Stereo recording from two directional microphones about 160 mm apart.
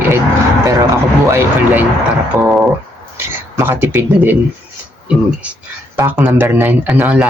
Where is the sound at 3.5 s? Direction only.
15° right (ahead or behind).